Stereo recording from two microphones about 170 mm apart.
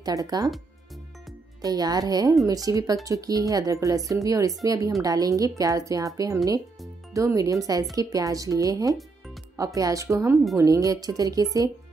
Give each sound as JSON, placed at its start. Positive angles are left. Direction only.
{"t": 0.0, "sound": "speech", "side_deg": -20}
{"t": 1.6, "sound": "speech", "side_deg": -20}